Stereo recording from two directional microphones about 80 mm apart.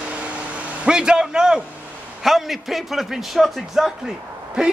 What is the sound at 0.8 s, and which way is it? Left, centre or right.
A man's voice, centre.